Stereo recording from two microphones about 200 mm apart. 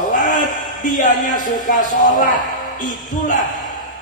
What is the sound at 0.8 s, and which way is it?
Music, 40° left (ahead or behind).